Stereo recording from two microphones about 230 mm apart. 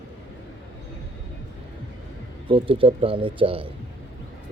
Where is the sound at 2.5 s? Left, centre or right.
Right.